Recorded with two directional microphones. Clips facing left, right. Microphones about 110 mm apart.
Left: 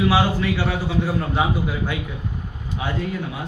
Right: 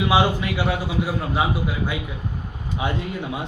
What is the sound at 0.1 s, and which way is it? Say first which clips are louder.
A man's voice: even; 15° right (ahead or behind).